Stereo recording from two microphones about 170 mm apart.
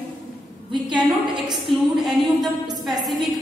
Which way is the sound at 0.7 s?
25° right (ahead or behind).